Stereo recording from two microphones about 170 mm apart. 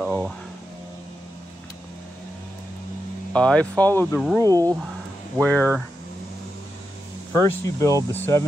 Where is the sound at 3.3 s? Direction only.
5° left (ahead or behind).